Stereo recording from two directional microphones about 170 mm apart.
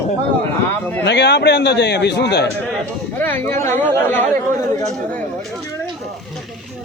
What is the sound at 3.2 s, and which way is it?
A man's voice, 10° left (ahead or behind).